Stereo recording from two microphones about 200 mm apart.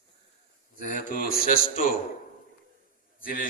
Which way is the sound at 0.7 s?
40° left (ahead or behind).